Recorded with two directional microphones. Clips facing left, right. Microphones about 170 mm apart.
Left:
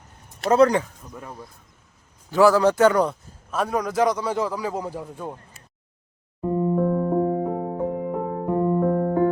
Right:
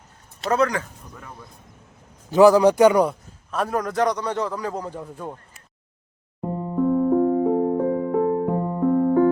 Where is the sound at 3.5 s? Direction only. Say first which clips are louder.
Even; centre (ahead or behind).